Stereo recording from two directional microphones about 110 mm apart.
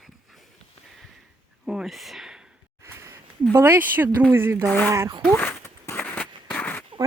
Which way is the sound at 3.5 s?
20° right (ahead or behind).